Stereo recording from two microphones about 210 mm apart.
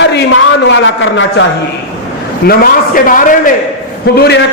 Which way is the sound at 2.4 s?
45° left (ahead or behind).